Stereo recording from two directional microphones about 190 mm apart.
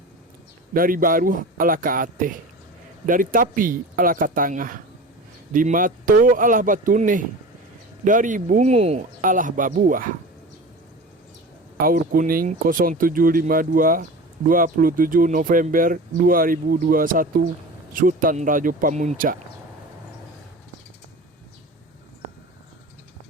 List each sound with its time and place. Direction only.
0.7 s speech: 50° right (ahead or behind)
11.8 s speech: 50° right (ahead or behind)